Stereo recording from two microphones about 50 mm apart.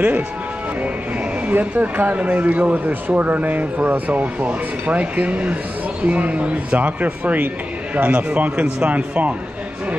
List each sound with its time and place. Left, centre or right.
1.5 s speech: right
8.6 s speech: centre
8.9 s speech: right